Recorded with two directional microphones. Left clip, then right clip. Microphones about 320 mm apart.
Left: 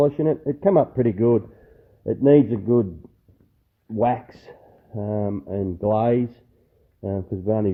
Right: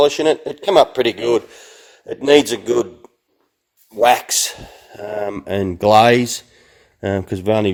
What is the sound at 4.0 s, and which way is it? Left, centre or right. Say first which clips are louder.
Speech: right 9 dB; centre.